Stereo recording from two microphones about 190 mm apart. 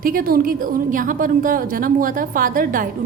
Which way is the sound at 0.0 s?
50° right (ahead or behind).